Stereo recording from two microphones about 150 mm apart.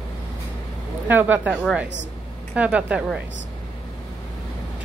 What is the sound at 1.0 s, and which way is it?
A woman's voice, 15° right (ahead or behind).